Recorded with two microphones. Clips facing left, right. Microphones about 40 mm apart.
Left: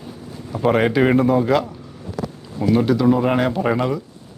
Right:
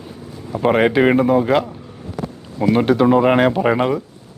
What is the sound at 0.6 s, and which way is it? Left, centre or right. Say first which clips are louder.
Speech: right 2 dB; centre.